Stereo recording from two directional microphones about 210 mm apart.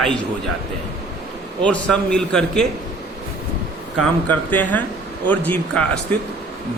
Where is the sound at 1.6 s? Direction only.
5° left (ahead or behind).